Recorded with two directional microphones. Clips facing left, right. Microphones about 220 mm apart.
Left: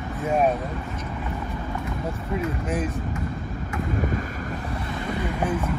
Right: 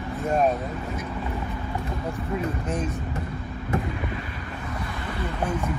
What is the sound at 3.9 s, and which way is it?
Vehicle, 45° left (ahead or behind).